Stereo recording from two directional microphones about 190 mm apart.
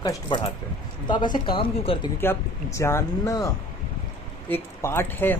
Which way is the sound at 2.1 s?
15° left (ahead or behind).